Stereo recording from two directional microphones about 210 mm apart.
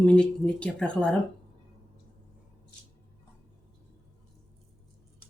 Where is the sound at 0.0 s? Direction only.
5° left (ahead or behind).